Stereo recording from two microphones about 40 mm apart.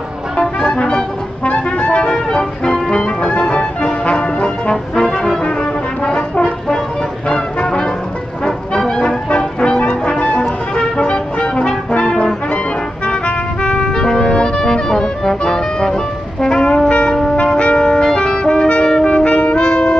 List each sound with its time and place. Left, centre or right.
0.6 s music: centre
4.9 s trombone: centre
6.0 s brass instrument: left
8.5 s music: centre
11.9 s brass instrument: left
13.0 s music: left